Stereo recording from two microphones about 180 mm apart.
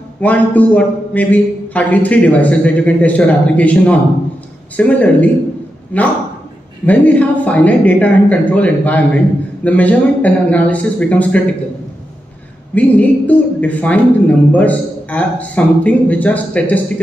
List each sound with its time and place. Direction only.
0.2 s a woman's voice: 10° left (ahead or behind)
12.7 s a woman's voice: 10° left (ahead or behind)